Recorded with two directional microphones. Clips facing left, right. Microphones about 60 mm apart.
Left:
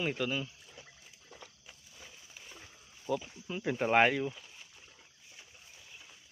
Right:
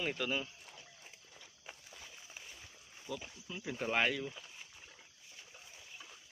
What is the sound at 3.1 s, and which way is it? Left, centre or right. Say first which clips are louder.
Speech: left 9 dB; left.